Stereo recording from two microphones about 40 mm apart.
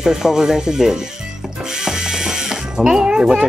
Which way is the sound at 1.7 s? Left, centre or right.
Centre.